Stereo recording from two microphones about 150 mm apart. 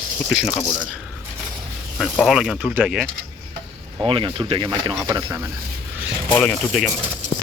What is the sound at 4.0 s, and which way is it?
Speech, 35° right (ahead or behind).